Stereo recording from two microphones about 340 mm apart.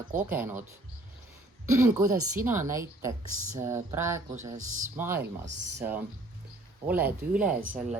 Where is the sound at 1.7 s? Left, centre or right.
Centre.